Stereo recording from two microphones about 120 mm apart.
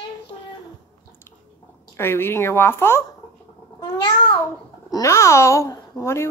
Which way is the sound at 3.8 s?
35° left (ahead or behind).